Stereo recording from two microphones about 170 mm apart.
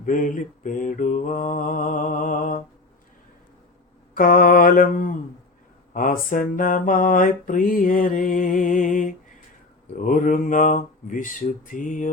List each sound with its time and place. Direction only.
0.0 s mantra: 50° left (ahead or behind)
4.1 s mantra: 55° left (ahead or behind)